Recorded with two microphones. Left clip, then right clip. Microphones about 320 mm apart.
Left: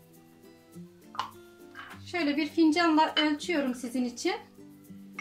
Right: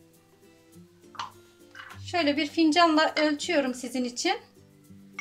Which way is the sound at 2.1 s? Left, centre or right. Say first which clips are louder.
Right 3 dB; right.